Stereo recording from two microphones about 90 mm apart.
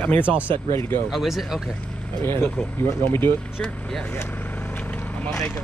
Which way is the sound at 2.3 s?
25° left (ahead or behind).